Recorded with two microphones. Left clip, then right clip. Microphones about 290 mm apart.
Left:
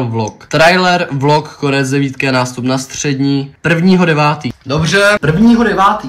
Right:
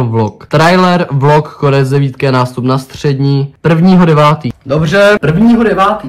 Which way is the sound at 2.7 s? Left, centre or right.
Centre.